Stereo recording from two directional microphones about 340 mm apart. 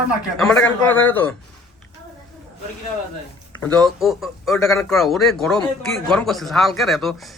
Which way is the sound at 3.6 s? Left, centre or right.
Centre.